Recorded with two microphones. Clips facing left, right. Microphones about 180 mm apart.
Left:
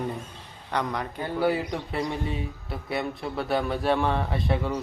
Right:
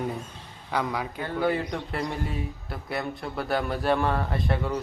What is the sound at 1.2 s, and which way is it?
Speech, 10° left (ahead or behind).